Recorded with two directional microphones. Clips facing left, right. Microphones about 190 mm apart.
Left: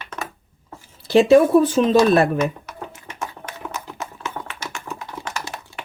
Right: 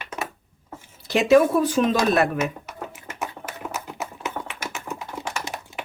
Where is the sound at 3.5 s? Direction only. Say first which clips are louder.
Even; 5° right (ahead or behind).